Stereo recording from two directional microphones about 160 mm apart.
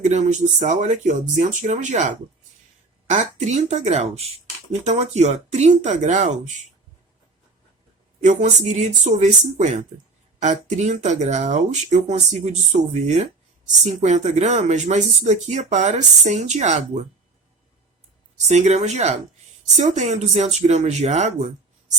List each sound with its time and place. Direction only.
0.0 s speech: 45° right (ahead or behind)
8.2 s speech: 50° right (ahead or behind)
18.4 s speech: 45° right (ahead or behind)